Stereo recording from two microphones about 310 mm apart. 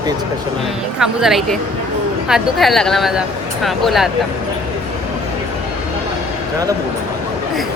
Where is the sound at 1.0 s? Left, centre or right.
Centre.